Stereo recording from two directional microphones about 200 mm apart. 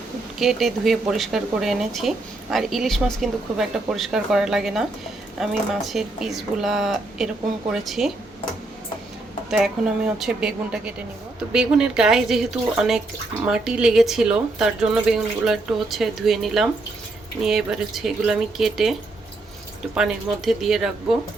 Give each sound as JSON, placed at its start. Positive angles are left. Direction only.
{"t": 0.3, "sound": "speech", "side_deg": 0}
{"t": 9.5, "sound": "speech", "side_deg": 0}
{"t": 20.0, "sound": "speech", "side_deg": 0}